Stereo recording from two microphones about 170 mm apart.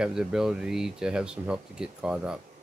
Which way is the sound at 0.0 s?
5° right (ahead or behind).